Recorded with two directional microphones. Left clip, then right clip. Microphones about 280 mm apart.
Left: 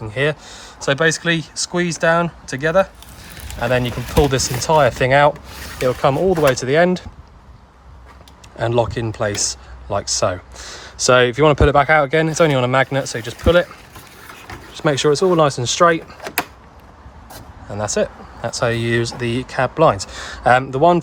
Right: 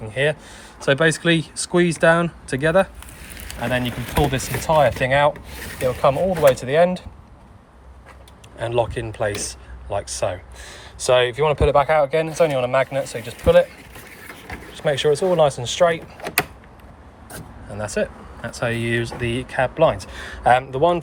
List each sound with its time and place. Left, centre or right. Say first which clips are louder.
0.1 s speech: left 1 dB; centre
8.5 s speech: left 3 dB; centre
14.7 s speech: left 3 dB; centre
17.7 s speech: left 4 dB; centre